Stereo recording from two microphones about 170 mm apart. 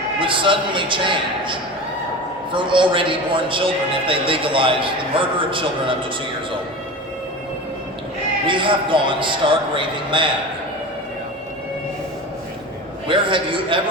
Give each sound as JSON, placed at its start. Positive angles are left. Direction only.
{"t": 0.2, "sound": "a man's voice", "side_deg": -30}
{"t": 8.4, "sound": "a man's voice", "side_deg": -30}
{"t": 13.1, "sound": "a man's voice", "side_deg": -30}